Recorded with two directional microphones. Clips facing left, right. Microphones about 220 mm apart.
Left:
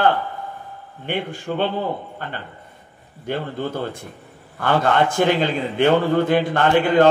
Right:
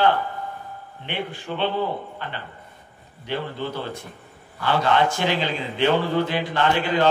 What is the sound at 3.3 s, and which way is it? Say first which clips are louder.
Speech: left 3 dB; 50° left (ahead or behind).